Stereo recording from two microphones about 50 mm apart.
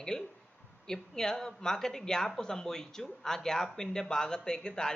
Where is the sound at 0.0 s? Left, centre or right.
Centre.